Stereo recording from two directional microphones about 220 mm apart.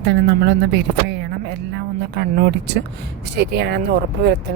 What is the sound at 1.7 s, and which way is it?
Music, 50° right (ahead or behind).